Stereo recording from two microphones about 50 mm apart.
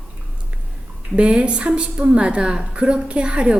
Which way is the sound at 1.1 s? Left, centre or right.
Centre.